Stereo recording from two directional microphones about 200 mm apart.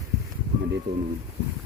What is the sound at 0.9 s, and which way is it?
Speech, 60° right (ahead or behind).